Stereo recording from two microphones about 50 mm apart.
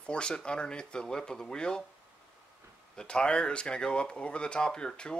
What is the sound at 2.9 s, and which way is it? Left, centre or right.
Speech, centre.